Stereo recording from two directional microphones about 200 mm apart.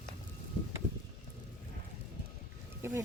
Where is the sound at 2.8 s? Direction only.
15° right (ahead or behind).